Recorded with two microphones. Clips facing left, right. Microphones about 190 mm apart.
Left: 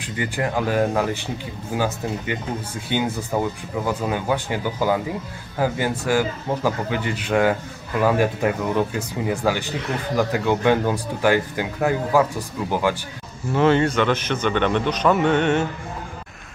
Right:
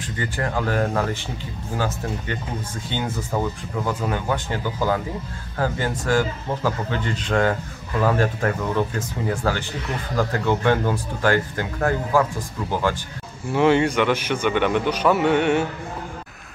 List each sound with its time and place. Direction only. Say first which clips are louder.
0.0 s speech: left 2 dB; 15° left (ahead or behind)
2.9 s speech: left 4 dB; 10° left (ahead or behind)
13.5 s a man's voice: even; 15° right (ahead or behind)